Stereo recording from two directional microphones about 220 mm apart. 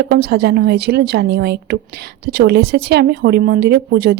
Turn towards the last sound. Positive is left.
turn(degrees=-45)  # may be behind; listen again after turning